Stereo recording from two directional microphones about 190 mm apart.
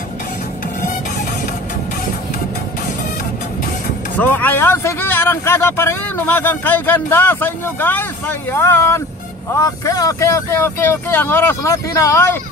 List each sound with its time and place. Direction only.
4.2 s speech: 10° left (ahead or behind)